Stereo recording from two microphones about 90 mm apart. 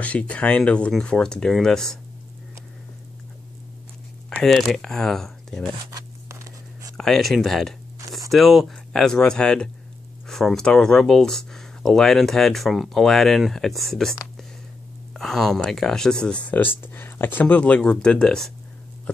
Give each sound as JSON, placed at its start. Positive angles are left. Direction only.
{"t": 0.0, "sound": "speech", "side_deg": 15}
{"t": 4.4, "sound": "speech", "side_deg": 5}
{"t": 5.9, "sound": "a sound", "side_deg": -40}
{"t": 7.0, "sound": "speech", "side_deg": 5}
{"t": 15.1, "sound": "speech", "side_deg": 5}